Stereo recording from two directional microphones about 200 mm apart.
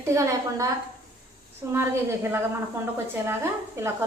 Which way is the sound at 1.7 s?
10° right (ahead or behind).